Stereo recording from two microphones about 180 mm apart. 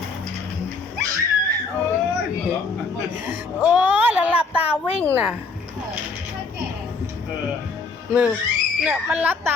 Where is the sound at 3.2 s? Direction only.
10° right (ahead or behind).